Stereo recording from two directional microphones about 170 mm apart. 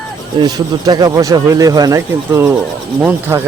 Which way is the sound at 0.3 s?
25° right (ahead or behind).